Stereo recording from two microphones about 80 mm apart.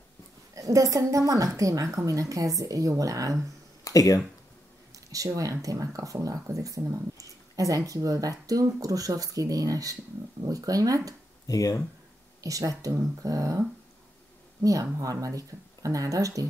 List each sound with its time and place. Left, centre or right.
0.6 s speech: right
3.8 s speech: left
4.9 s speech: right
11.4 s speech: left
12.4 s speech: right